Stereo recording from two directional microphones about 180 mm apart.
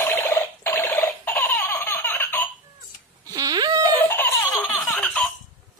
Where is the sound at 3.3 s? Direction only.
20° right (ahead or behind).